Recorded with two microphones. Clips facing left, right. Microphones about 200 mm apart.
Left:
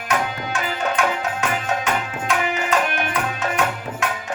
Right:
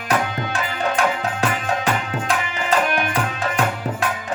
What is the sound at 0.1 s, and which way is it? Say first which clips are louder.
Music: right 2 dB; 35° right (ahead or behind).